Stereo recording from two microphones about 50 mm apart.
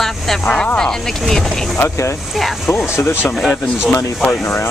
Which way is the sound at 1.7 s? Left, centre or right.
Left.